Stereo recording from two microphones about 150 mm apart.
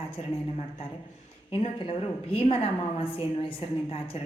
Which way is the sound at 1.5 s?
40° left (ahead or behind).